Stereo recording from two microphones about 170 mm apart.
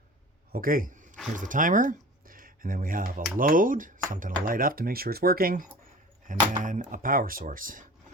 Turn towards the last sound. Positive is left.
turn(degrees=-55)  # may be behind; listen again after turning